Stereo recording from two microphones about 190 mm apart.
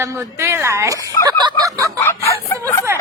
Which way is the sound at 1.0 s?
20° right (ahead or behind).